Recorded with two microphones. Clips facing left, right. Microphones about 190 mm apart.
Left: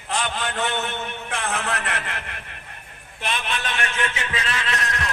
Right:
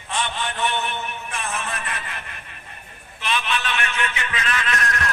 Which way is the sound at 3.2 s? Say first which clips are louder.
Right 2 dB; 40° left (ahead or behind).